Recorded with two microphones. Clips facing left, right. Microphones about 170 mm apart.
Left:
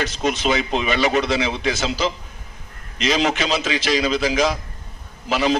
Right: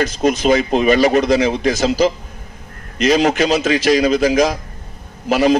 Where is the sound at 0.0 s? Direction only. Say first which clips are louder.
Right 6 dB; 40° right (ahead or behind).